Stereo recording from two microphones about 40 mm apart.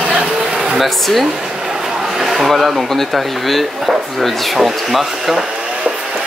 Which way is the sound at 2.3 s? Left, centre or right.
Centre.